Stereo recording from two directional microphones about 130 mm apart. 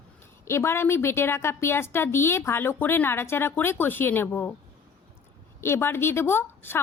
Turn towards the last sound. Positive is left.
turn(degrees=15)  # may be behind; listen again after turning